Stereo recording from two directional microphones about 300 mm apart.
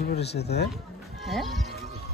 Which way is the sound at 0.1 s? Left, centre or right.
Left.